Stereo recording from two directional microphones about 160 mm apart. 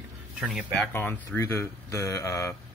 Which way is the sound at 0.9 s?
15° left (ahead or behind).